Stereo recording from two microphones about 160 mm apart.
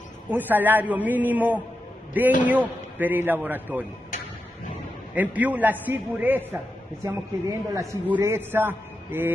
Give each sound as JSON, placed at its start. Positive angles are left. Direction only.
{"t": 0.3, "sound": "a man's voice", "side_deg": -10}
{"t": 5.1, "sound": "a man's voice", "side_deg": -10}